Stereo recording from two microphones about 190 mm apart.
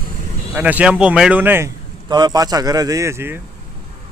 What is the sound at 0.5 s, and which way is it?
A man's voice, 5° right (ahead or behind).